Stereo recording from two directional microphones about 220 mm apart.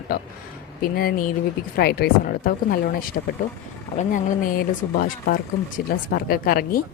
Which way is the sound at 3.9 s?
35° left (ahead or behind).